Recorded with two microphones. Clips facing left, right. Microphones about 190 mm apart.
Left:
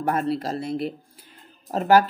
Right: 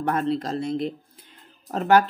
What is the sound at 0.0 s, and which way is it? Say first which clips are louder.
Speech: even; 5° left (ahead or behind).